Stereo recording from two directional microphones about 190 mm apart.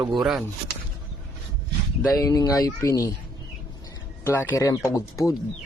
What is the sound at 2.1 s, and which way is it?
Speech, 20° left (ahead or behind).